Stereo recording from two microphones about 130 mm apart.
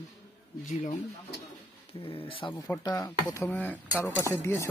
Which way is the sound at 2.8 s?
25° left (ahead or behind).